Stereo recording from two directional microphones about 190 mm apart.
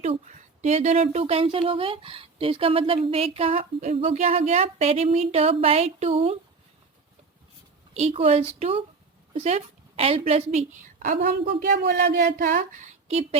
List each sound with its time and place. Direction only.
0.0 s speech: 35° right (ahead or behind)
7.9 s a woman's voice: 35° right (ahead or behind); by 12.2 s 55° right (ahead or behind)
12.2 s speech: 45° right (ahead or behind)